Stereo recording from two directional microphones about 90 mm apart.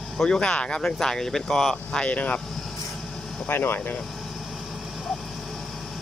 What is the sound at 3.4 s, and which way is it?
Speech, 25° left (ahead or behind).